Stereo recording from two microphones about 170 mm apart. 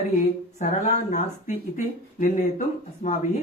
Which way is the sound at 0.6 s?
45° left (ahead or behind).